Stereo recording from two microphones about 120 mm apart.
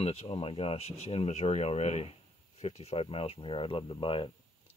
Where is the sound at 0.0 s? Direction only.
55° left (ahead or behind).